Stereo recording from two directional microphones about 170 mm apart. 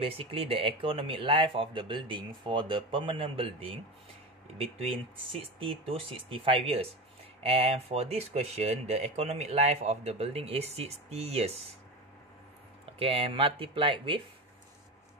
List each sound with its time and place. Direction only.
0.0 s speech: 35° right (ahead or behind)
13.0 s speech: 35° right (ahead or behind)